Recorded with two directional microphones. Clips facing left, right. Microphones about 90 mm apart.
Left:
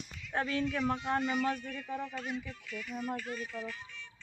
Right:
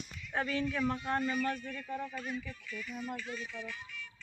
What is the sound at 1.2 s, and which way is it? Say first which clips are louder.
Speech: left 1 dB; 85° left.